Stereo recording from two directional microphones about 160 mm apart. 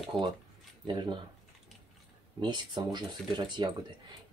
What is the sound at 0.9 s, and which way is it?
Speech, 30° right (ahead or behind).